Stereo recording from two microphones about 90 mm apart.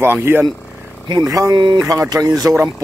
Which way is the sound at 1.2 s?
40° right (ahead or behind).